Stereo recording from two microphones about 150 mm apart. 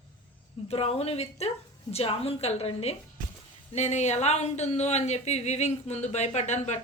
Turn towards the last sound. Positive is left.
turn(degrees=50)  # may be behind; listen again after turning